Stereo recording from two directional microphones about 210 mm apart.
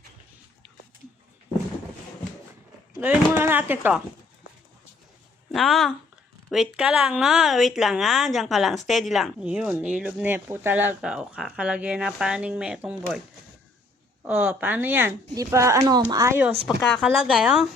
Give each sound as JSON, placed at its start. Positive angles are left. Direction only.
{"t": 3.0, "sound": "speech", "side_deg": -10}
{"t": 5.5, "sound": "speech", "side_deg": 0}
{"t": 14.3, "sound": "speech", "side_deg": -10}
{"t": 16.6, "sound": "speech", "side_deg": 0}